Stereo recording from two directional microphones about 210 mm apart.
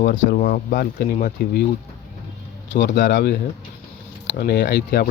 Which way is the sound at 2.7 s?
55° left (ahead or behind).